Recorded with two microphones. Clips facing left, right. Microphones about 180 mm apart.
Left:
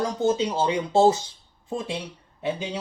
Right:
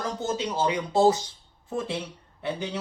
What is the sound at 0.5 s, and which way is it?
Speech, 25° left (ahead or behind).